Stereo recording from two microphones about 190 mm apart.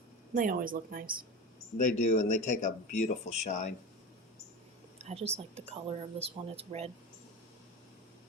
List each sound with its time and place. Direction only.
0.3 s a woman's voice: 45° right (ahead or behind)
2.0 s speech: 40° left (ahead or behind)
4.9 s speech: 35° right (ahead or behind)